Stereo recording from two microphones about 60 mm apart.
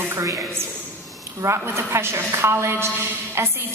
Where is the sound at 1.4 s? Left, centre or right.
Right.